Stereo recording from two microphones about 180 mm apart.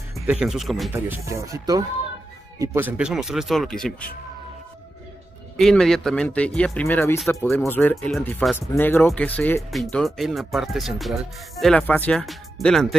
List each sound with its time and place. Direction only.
0.3 s speech: 5° right (ahead or behind)
0.9 s speech: 15° right (ahead or behind); by 3.9 s 5° left (ahead or behind)
5.6 s speech: centre (ahead or behind)